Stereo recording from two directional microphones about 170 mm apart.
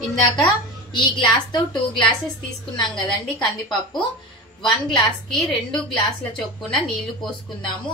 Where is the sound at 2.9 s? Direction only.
5° left (ahead or behind).